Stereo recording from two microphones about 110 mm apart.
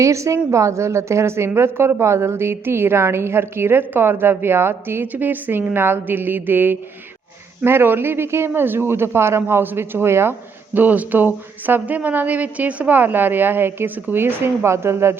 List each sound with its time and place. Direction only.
0.0 s a woman's voice: 25° right (ahead or behind)